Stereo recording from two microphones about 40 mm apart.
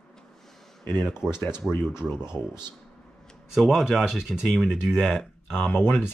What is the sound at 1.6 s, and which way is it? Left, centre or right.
Speech, right.